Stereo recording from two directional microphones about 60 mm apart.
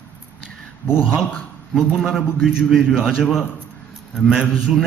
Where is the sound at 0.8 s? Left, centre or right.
Centre.